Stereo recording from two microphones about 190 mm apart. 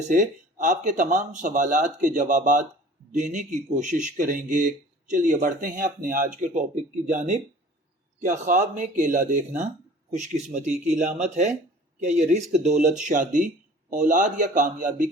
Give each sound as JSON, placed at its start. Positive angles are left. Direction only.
{"t": 0.1, "sound": "speech", "side_deg": -40}